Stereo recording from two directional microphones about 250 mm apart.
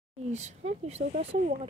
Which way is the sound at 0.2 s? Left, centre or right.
Right.